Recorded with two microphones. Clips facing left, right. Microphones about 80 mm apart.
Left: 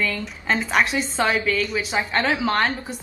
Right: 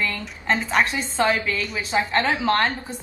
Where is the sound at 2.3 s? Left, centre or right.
Centre.